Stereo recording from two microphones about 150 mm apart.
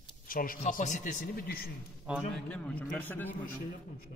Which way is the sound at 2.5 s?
5° left (ahead or behind).